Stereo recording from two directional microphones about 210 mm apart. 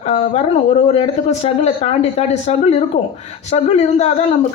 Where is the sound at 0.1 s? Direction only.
30° left (ahead or behind).